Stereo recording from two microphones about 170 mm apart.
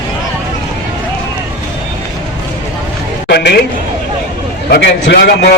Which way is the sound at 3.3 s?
75° left (ahead or behind).